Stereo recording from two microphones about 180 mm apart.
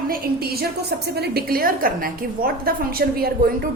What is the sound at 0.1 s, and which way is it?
A woman's voice, 60° right (ahead or behind).